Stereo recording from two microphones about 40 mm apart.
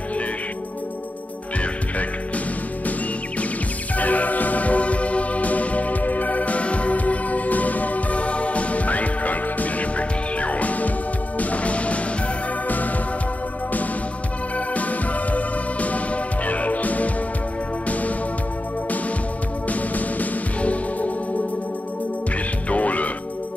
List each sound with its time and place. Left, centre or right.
1.6 s music: left
3.9 s music: left
12.6 s music: left
14.7 s music: left
19.7 s music: left
22.7 s music: left